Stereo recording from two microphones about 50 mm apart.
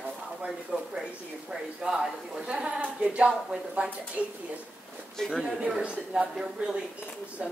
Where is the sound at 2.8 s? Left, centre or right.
Right.